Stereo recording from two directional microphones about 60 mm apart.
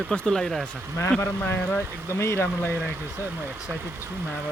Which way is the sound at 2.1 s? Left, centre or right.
Left.